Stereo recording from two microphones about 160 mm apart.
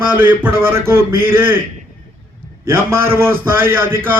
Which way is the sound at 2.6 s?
15° right (ahead or behind).